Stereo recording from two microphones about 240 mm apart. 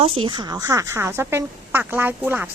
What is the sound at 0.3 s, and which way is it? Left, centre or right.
A woman's voice, centre.